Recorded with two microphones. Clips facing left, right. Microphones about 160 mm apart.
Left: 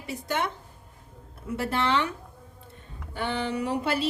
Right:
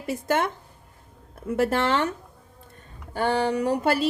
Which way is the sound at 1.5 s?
50° right (ahead or behind).